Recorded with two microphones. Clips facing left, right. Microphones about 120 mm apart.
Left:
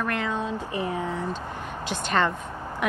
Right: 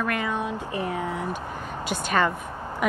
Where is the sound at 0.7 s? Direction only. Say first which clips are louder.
Even; 20° left (ahead or behind).